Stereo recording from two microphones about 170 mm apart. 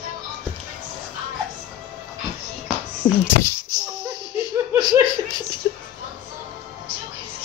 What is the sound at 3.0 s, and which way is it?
Speech, 25° left (ahead or behind).